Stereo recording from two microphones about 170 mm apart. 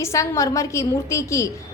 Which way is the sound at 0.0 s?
20° left (ahead or behind).